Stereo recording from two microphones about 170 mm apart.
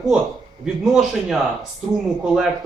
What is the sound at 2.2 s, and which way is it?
Speech, 5° right (ahead or behind).